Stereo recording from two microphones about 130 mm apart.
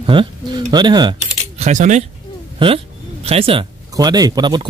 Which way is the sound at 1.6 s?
65° right (ahead or behind).